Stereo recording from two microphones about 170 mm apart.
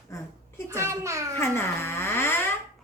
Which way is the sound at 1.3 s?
15° left (ahead or behind).